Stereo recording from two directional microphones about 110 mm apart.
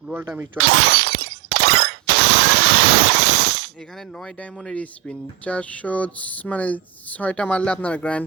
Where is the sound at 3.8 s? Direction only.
5° left (ahead or behind).